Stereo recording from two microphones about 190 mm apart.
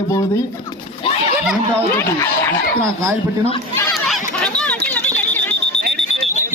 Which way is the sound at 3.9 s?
Centre (ahead or behind).